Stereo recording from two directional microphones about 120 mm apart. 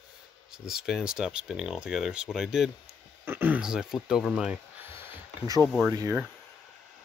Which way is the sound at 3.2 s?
20° right (ahead or behind).